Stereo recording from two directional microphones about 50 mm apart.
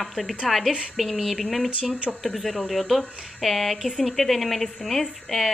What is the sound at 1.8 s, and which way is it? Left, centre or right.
Speech, right.